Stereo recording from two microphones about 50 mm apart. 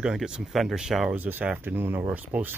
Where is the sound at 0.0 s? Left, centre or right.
Centre.